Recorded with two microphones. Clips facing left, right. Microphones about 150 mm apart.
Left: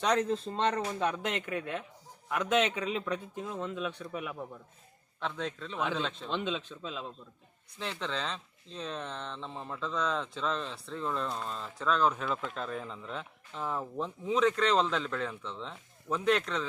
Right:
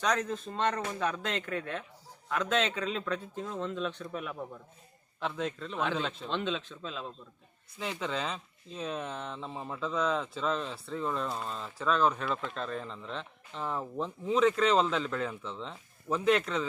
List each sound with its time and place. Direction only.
0.0 s a man's voice: 30° left (ahead or behind); by 6.3 s 5° right (ahead or behind)
6.3 s a man's voice: 10° left (ahead or behind)
7.8 s speech: 10° right (ahead or behind)